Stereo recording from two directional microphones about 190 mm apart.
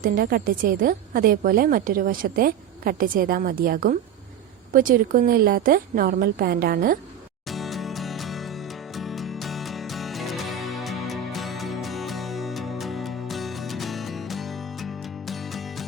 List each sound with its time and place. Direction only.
0.0 s speech: 50° right (ahead or behind)
7.4 s music: centre (ahead or behind)